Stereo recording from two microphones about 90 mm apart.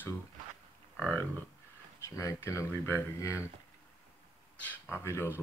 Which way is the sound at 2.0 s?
35° left (ahead or behind).